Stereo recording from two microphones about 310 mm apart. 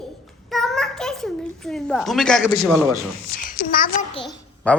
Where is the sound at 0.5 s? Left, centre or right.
Centre.